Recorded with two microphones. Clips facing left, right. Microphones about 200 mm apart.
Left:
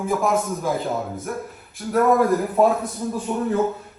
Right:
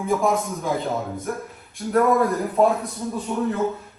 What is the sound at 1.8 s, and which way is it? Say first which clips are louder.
Speech: right 1 dB; 10° right (ahead or behind).